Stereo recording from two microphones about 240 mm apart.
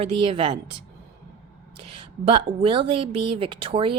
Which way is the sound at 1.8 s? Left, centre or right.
Right.